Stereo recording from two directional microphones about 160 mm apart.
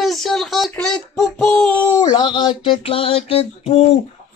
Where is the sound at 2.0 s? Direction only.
30° left (ahead or behind).